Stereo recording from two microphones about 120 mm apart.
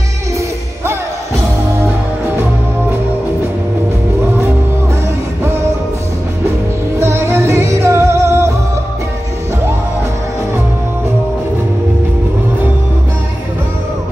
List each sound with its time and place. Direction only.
5.4 s music: 20° right (ahead or behind)
7.0 s music: 20° right (ahead or behind)